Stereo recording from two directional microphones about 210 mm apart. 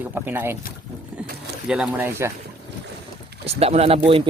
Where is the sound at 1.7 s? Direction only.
5° right (ahead or behind).